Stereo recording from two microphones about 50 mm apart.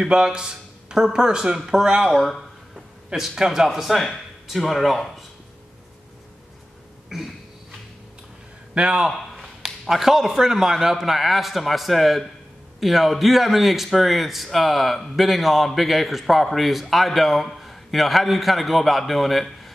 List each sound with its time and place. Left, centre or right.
0.1 s a man's voice: centre
7.1 s a sound: centre
8.7 s a man's voice: centre
9.3 s a man's voice: centre